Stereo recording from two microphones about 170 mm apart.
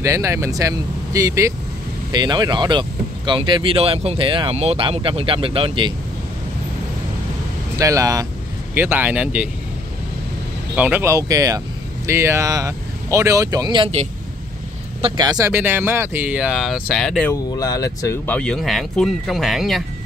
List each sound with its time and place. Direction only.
0.0 s speech: 15° right (ahead or behind)
7.8 s speech: 20° right (ahead or behind)
10.8 s speech: 10° right (ahead or behind)
15.0 s speech: 30° right (ahead or behind); by 17.3 s centre (ahead or behind)
17.3 s speech: 20° left (ahead or behind); by 19.8 s centre (ahead or behind)